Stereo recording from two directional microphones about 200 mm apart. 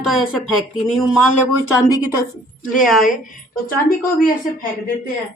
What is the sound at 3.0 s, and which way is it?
A woman's voice, 40° left (ahead or behind).